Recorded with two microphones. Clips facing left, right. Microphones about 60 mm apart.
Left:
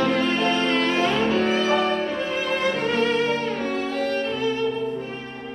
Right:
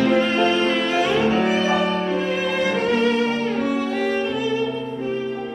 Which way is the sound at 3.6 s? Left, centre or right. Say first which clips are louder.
Right 3 dB; centre.